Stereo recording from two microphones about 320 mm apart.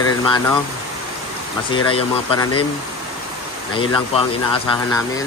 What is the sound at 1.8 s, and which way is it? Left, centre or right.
Speech, centre.